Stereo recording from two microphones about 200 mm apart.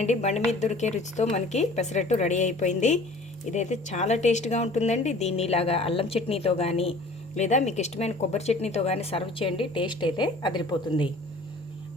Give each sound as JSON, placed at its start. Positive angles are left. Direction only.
{"t": 0.0, "sound": "a woman's voice", "side_deg": 35}